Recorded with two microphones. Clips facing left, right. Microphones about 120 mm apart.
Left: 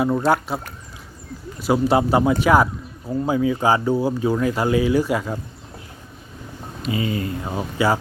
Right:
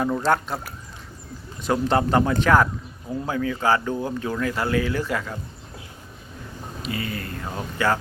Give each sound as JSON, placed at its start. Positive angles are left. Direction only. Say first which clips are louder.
{"t": 0.0, "sound": "speech", "louder": "left 3 dB", "side_deg": 10}
{"t": 1.6, "sound": "speech", "louder": "left 3 dB", "side_deg": 10}
{"t": 6.9, "sound": "speech", "louder": "left 7 dB", "side_deg": 20}